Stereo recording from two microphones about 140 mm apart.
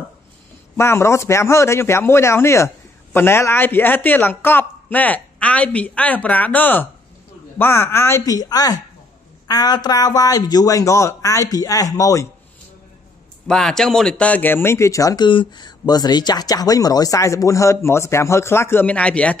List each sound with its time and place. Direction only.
0.7 s speech: 20° left (ahead or behind)
13.5 s speech: 5° left (ahead or behind)